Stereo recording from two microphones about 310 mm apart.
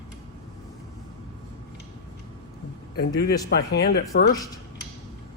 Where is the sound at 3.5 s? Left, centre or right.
Left.